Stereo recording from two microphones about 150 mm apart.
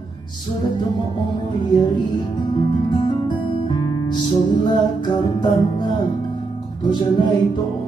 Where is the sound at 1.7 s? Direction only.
30° left (ahead or behind).